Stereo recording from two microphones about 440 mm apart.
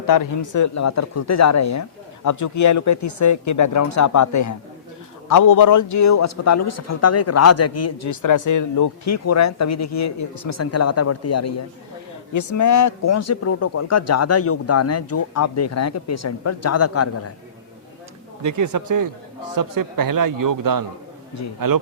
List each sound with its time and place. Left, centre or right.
0.1 s a man's voice: left
18.4 s a man's voice: right